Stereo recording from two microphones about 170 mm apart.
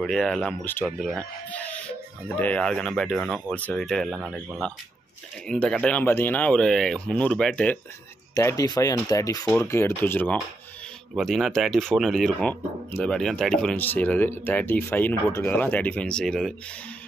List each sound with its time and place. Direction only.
0.0 s speech: centre (ahead or behind)
8.4 s speech: 20° left (ahead or behind)
11.1 s speech: centre (ahead or behind)